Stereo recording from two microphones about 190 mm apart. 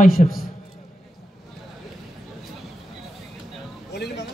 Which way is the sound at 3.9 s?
60° left (ahead or behind).